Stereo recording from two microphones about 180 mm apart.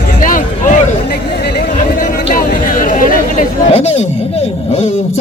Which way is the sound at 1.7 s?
50° left (ahead or behind).